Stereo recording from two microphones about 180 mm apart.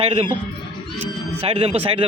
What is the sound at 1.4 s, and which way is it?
Speech, 30° right (ahead or behind).